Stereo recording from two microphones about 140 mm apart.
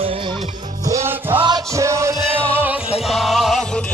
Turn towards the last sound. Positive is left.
turn(degrees=0)  # may be behind; listen again after turning